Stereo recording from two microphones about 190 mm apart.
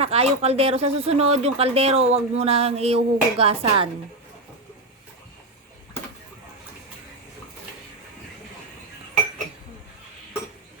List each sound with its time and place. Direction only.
0.0 s speech: 30° right (ahead or behind)